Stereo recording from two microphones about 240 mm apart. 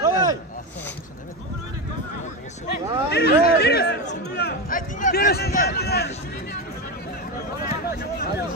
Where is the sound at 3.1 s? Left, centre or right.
Left.